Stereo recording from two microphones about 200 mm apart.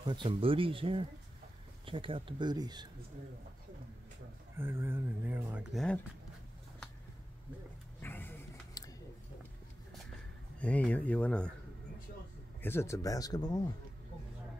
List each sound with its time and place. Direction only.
0.1 s speech: 25° right (ahead or behind)
4.6 s speech: 10° right (ahead or behind)
8.0 s a sound: 10° left (ahead or behind)
10.6 s speech: 5° left (ahead or behind)
12.6 s speech: 15° left (ahead or behind)